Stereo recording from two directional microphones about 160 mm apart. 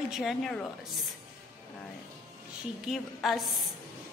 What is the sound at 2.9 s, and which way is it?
Speech, centre (ahead or behind).